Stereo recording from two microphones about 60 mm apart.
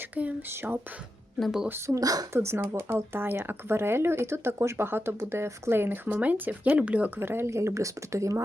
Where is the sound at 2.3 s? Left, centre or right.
Right.